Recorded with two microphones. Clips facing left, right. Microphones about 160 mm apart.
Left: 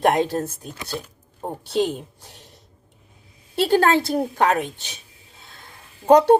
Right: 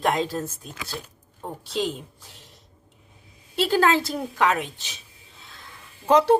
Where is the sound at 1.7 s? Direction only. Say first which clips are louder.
Left 5 dB; 55° left (ahead or behind).